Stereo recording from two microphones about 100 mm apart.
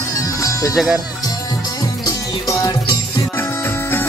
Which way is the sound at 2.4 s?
35° left (ahead or behind).